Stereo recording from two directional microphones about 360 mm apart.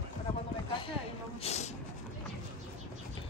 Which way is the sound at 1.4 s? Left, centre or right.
Centre.